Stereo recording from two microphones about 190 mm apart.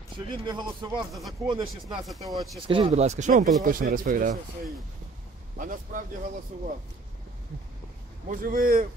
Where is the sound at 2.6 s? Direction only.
30° right (ahead or behind); by 4.4 s 45° right (ahead or behind).